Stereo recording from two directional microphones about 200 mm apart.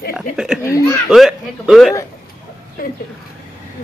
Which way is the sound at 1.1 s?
Centre (ahead or behind).